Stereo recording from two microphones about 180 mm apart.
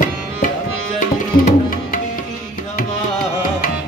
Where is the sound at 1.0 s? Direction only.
45° left (ahead or behind).